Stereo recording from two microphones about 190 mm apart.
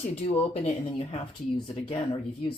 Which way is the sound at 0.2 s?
30° left (ahead or behind).